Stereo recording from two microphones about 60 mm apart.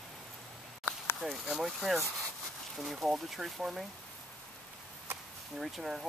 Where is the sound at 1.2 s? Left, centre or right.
Centre.